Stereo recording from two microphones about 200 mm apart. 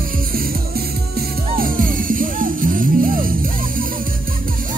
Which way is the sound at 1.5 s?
45° right (ahead or behind).